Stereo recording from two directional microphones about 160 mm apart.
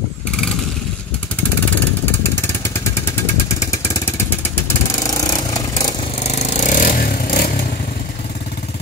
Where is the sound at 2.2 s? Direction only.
15° left (ahead or behind).